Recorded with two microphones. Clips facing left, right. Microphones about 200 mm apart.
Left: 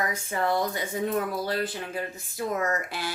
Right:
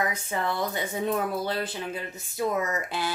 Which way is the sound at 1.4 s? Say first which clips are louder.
Left 1 dB; 20° right (ahead or behind).